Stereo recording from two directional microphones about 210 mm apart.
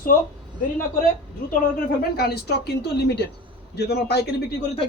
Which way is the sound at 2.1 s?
50° left (ahead or behind).